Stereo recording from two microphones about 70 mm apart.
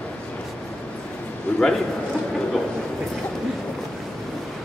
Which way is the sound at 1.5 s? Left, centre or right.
Centre.